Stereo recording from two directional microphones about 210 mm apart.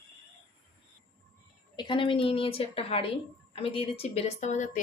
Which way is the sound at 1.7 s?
20° left (ahead or behind).